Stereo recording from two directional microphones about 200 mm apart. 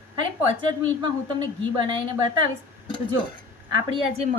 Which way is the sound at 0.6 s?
25° right (ahead or behind).